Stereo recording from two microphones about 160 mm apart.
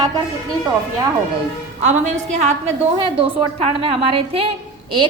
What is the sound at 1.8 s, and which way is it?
A woman's voice, 50° right (ahead or behind).